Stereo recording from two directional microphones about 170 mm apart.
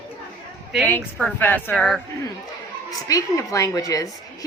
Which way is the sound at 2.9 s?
20° left (ahead or behind).